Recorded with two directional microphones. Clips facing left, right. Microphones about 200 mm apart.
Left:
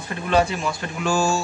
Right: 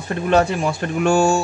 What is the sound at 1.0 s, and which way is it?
Speech, 60° right (ahead or behind).